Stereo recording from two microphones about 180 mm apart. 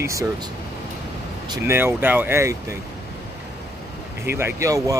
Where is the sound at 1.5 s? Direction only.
15° right (ahead or behind).